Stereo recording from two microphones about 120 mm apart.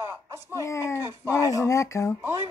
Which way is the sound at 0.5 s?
25° left (ahead or behind).